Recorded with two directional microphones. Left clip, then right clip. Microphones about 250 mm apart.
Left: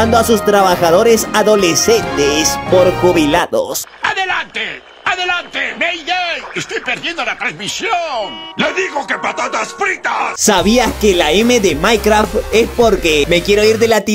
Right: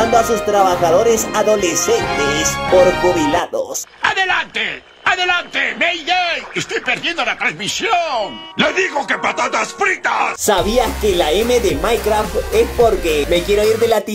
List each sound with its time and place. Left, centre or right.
0.0 s speech: left
4.0 s speech: centre
10.4 s speech: left